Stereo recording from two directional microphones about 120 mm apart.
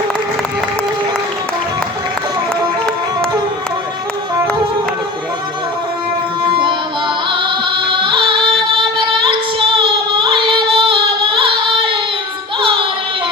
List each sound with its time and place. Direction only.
6.5 s music: 40° right (ahead or behind)
7.9 s music: 45° right (ahead or behind)